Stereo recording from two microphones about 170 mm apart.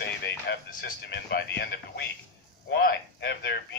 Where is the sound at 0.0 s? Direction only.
85° left.